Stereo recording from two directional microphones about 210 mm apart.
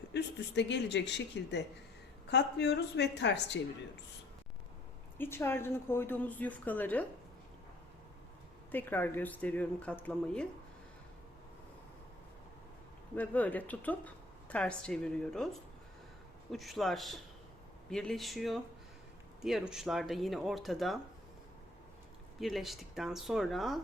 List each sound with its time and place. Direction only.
0.1 s speech: 55° left (ahead or behind)
5.1 s a woman's voice: 10° left (ahead or behind)
8.7 s a woman's voice: 10° left (ahead or behind)
13.1 s a woman's voice: 10° left (ahead or behind)
16.5 s speech: centre (ahead or behind)
22.4 s speech: centre (ahead or behind)